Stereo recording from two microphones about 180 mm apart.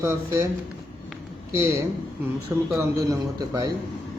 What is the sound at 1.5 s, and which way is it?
Speech, 15° right (ahead or behind).